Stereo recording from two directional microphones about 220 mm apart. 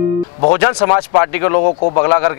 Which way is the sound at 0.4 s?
20° left (ahead or behind).